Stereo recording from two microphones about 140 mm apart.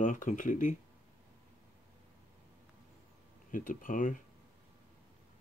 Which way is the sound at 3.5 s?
70° left (ahead or behind).